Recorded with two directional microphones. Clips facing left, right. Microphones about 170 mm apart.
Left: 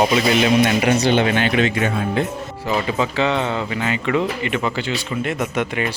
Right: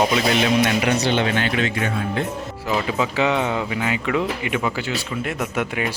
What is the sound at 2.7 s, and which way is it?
Speech, centre (ahead or behind).